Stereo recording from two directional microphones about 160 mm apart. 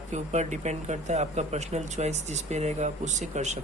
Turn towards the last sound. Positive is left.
turn(degrees=-45)  # may be behind; listen again after turning